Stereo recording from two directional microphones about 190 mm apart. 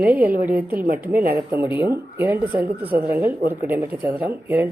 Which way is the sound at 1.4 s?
10° right (ahead or behind).